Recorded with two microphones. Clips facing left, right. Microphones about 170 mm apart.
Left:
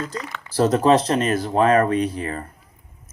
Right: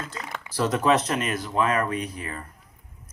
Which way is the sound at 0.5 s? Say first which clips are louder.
Left 6 dB; 35° left (ahead or behind).